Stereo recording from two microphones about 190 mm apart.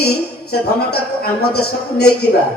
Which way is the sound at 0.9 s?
55° left (ahead or behind).